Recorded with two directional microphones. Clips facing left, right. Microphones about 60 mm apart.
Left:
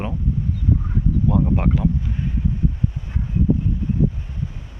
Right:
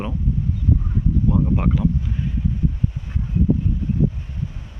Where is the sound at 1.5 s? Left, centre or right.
Left.